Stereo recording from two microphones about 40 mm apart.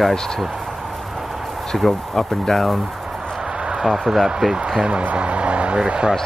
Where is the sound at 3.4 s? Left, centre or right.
Centre.